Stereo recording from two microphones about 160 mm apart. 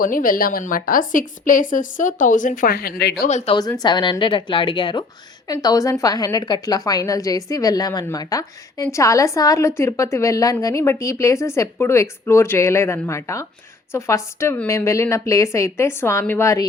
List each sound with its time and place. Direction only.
0.0 s a woman's voice: 60° left (ahead or behind); by 3.2 s 85° left
3.2 s speech: 45° left (ahead or behind)
3.5 s a woman's voice: 25° left (ahead or behind)